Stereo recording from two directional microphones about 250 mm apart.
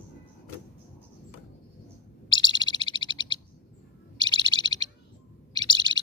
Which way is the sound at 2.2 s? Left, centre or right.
Centre.